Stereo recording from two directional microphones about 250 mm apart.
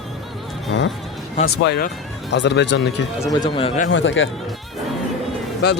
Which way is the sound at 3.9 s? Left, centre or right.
Left.